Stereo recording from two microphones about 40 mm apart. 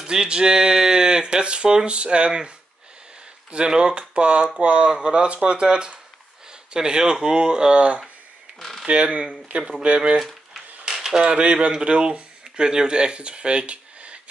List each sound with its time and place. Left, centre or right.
0.0 s speech: centre
3.5 s speech: right
8.5 s a sound: centre
8.8 s speech: right
10.9 s typewriter: centre
11.2 s speech: right